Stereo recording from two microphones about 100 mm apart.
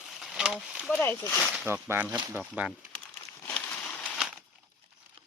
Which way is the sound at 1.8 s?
25° right (ahead or behind).